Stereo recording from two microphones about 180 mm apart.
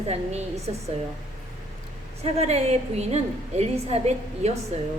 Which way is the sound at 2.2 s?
35° right (ahead or behind).